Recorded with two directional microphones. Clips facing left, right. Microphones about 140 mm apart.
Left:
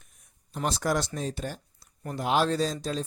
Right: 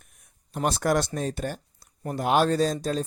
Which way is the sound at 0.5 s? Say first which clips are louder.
Right 4 dB; 55° right (ahead or behind).